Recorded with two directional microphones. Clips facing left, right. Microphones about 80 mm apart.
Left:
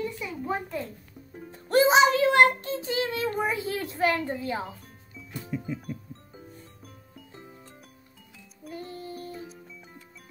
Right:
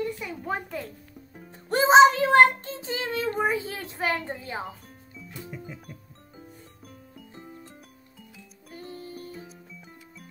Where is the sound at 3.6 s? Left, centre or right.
Right.